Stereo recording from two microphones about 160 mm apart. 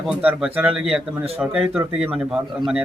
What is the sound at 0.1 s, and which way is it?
A man's voice, 5° right (ahead or behind).